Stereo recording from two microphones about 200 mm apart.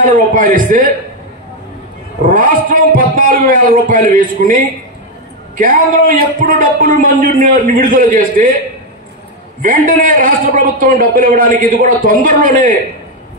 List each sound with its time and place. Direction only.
0.0 s a man's voice: 40° right (ahead or behind)
2.2 s a man's voice: 40° right (ahead or behind)
9.6 s a man's voice: 45° right (ahead or behind)